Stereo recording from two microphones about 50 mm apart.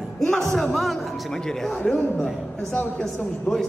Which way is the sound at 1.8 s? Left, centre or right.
Left.